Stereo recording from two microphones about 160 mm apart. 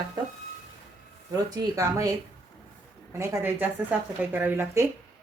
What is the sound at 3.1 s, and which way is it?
A woman's voice, 15° right (ahead or behind).